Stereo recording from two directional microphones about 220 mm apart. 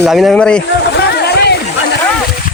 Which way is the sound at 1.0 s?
50° left (ahead or behind).